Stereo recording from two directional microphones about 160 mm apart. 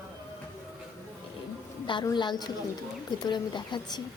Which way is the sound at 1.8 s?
30° left (ahead or behind).